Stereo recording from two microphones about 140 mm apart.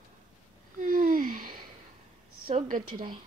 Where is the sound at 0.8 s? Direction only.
70° right (ahead or behind).